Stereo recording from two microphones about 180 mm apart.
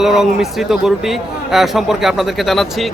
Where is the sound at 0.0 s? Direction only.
Centre (ahead or behind).